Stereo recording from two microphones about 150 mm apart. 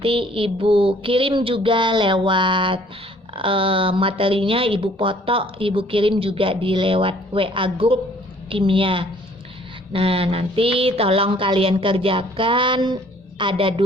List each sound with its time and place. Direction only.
0.0 s speech: 35° right (ahead or behind)